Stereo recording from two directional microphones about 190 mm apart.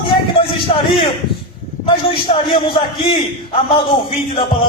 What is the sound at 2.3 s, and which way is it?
A man's voice, 35° left (ahead or behind).